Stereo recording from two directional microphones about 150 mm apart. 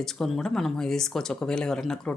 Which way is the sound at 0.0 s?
Centre (ahead or behind).